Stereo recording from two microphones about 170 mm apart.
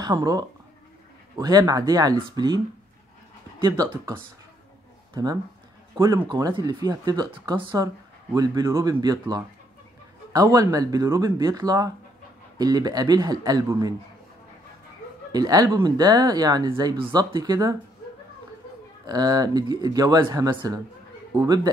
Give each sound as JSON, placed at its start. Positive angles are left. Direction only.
{"t": 0.0, "sound": "speech", "side_deg": -20}
{"t": 3.6, "sound": "speech", "side_deg": -20}
{"t": 15.3, "sound": "speech", "side_deg": -20}
{"t": 19.0, "sound": "speech", "side_deg": -25}